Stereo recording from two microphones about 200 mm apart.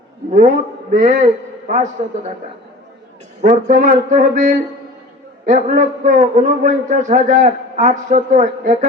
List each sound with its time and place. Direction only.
0.3 s a man's voice: 40° right (ahead or behind)
3.4 s a man's voice: 40° right (ahead or behind)